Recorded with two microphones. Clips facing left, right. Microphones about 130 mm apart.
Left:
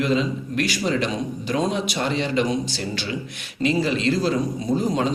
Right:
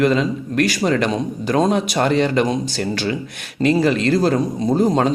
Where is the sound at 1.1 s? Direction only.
45° right (ahead or behind).